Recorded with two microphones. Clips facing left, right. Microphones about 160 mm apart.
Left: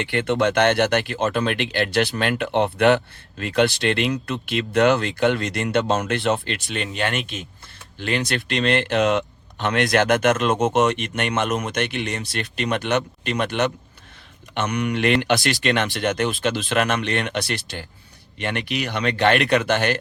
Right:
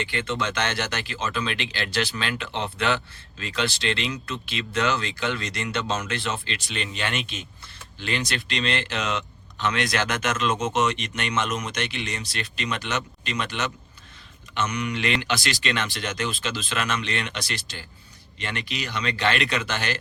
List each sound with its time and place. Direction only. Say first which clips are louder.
0.0 s speech: left 7 dB; 60° left (ahead or behind)